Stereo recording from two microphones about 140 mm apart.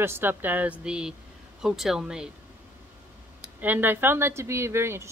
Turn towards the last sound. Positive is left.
turn(degrees=-20)  # may be behind; listen again after turning